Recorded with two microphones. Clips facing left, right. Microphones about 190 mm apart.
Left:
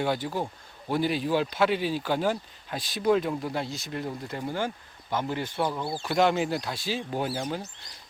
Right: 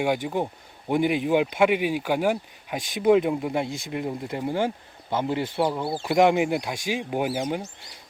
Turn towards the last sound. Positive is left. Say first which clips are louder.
# right 4 dB
turn(degrees=-15)  # may be behind; listen again after turning